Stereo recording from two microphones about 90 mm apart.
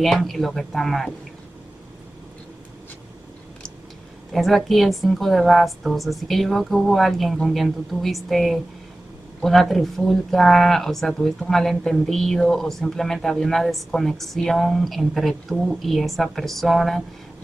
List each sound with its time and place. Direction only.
0.0 s speech: centre (ahead or behind)
4.3 s speech: centre (ahead or behind)